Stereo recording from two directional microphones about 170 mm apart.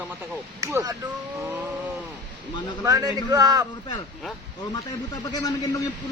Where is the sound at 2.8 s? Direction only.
20° right (ahead or behind).